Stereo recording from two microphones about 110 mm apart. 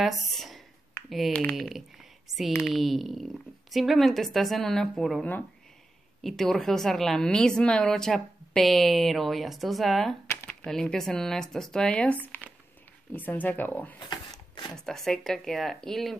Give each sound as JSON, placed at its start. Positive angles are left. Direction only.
{"t": 0.0, "sound": "a sound", "side_deg": 0}
{"t": 1.5, "sound": "speech", "side_deg": -5}
{"t": 2.3, "sound": "speech", "side_deg": -35}
{"t": 2.6, "sound": "a woman's voice", "side_deg": 0}
{"t": 6.2, "sound": "a woman's voice", "side_deg": 0}
{"t": 10.2, "sound": "a sound", "side_deg": 20}
{"t": 10.6, "sound": "a woman's voice", "side_deg": 5}
{"t": 13.9, "sound": "a sound", "side_deg": 40}
{"t": 14.8, "sound": "a woman's voice", "side_deg": 5}